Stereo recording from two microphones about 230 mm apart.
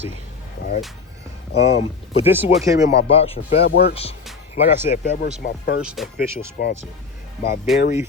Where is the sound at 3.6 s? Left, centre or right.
Left.